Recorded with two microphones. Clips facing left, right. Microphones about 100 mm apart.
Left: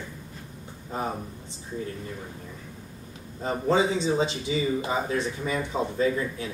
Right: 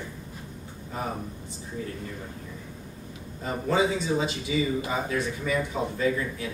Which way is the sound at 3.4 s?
25° left (ahead or behind).